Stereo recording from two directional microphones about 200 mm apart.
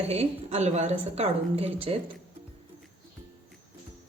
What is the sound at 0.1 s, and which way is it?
A woman's voice, 30° right (ahead or behind).